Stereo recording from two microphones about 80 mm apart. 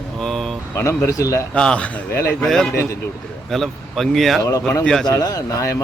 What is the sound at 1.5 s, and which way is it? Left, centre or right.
A man's voice, centre.